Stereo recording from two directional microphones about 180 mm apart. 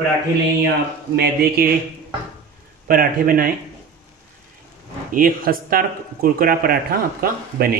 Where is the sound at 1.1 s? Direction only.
60° right (ahead or behind).